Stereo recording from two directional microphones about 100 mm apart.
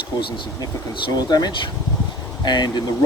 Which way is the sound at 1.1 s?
40° left (ahead or behind).